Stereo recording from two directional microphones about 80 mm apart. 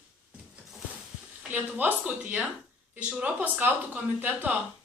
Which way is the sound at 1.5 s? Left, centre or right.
Right.